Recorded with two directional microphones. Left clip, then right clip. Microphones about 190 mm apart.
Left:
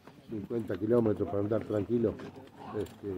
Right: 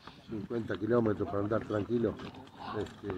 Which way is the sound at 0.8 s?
25° left (ahead or behind).